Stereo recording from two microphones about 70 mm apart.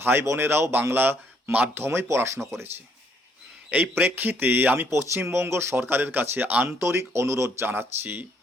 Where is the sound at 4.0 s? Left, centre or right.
Right.